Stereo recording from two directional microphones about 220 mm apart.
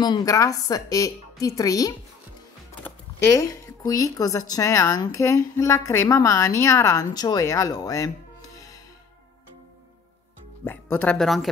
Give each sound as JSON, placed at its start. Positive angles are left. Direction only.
{"t": 0.0, "sound": "speech", "side_deg": 15}
{"t": 10.6, "sound": "speech", "side_deg": 10}